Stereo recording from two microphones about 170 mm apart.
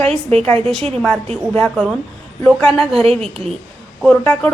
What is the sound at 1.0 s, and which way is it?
A woman's voice, 10° left (ahead or behind).